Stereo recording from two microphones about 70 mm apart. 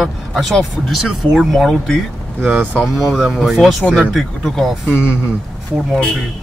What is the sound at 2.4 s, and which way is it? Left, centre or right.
Speech, centre.